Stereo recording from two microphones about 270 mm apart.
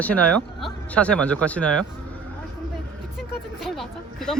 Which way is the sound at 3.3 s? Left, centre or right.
Centre.